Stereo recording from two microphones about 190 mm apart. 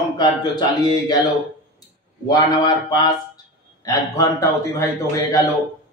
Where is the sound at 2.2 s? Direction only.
20° left (ahead or behind).